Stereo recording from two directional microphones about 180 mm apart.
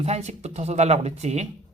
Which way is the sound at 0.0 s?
40° right (ahead or behind).